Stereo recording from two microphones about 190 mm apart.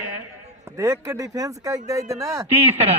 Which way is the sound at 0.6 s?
15° right (ahead or behind).